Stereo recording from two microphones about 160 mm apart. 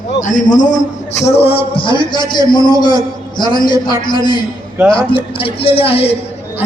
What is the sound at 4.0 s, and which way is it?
A man's voice, 30° left (ahead or behind).